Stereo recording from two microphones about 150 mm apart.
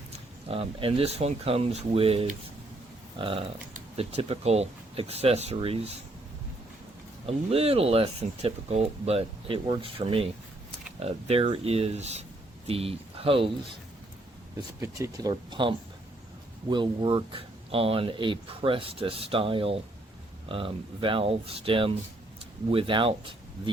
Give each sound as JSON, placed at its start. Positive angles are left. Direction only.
{"t": 0.1, "sound": "speech", "side_deg": -40}
{"t": 7.3, "sound": "speech", "side_deg": -40}
{"t": 14.8, "sound": "speech", "side_deg": -20}